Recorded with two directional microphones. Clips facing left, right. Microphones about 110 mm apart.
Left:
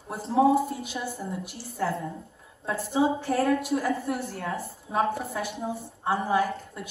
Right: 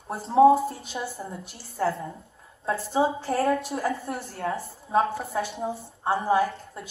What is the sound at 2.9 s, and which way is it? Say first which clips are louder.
A woman's voice: even; 30° right (ahead or behind).